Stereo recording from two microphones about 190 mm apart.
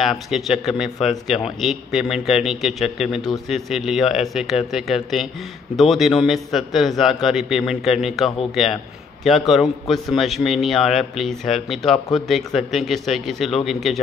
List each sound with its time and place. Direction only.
0.0 s a man's voice: centre (ahead or behind)
9.5 s a man's voice: centre (ahead or behind)